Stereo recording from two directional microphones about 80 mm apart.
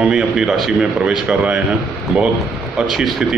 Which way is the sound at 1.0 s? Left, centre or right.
Centre.